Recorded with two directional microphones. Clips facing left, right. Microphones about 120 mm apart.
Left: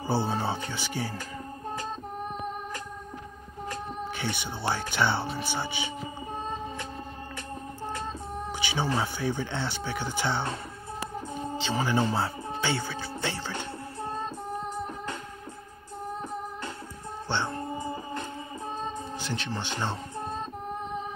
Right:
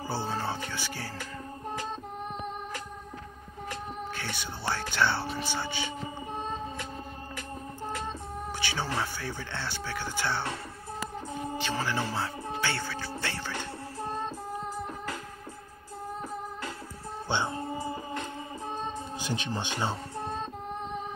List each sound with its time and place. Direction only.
0.0 s music: 25° left (ahead or behind)
4.2 s speech: 20° left (ahead or behind)
8.5 s speech: 15° left (ahead or behind)
11.6 s speech: 20° left (ahead or behind)
17.3 s music: 10° right (ahead or behind)
19.2 s speech: 15° right (ahead or behind)